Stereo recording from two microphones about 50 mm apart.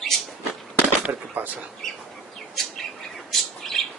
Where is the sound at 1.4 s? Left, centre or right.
Right.